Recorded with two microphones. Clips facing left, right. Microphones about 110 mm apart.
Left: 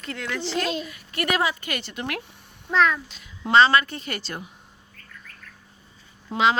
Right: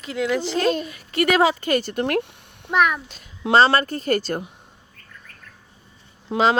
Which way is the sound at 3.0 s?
45° right (ahead or behind).